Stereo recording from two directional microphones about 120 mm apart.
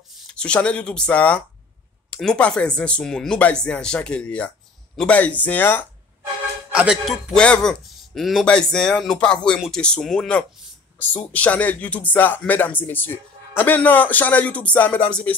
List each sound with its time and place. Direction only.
0.1 s speech: 10° left (ahead or behind)
6.7 s a man's voice: 5° right (ahead or behind)
7.3 s speech: 5° left (ahead or behind)